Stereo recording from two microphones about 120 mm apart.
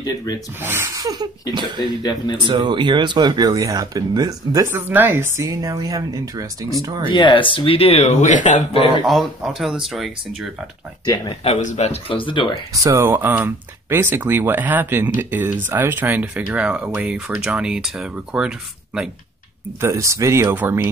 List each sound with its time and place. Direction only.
0.0 s speech: 30° left (ahead or behind)
0.6 s speech: 20° right (ahead or behind)
1.0 s a sound: 35° right (ahead or behind)
2.3 s speech: 40° right (ahead or behind)
7.1 s speech: 45° left (ahead or behind); by 8.6 s 90° left
9.0 s speech: centre (ahead or behind)
11.4 s speech: 65° left (ahead or behind)
12.1 s speech: 45° left (ahead or behind)
12.7 s speech: 25° right (ahead or behind); by 19.0 s 5° right (ahead or behind)
19.8 s speech: 25° right (ahead or behind)